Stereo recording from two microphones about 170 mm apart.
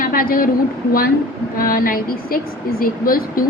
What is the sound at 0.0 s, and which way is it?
Speech, 55° left (ahead or behind).